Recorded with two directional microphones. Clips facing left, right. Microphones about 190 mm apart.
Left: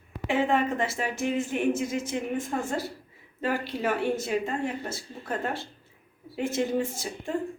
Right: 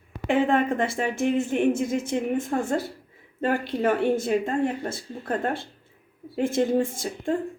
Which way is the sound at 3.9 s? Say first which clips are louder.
Right 5 dB; 55° right (ahead or behind).